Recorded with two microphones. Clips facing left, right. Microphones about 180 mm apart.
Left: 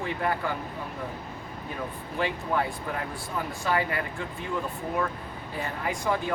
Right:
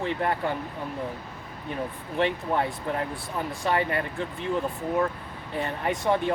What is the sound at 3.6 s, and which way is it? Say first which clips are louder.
Speech: right 2 dB; 25° right (ahead or behind).